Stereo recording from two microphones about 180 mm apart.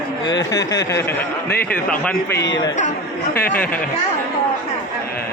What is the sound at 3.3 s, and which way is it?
Speech, 55° left (ahead or behind).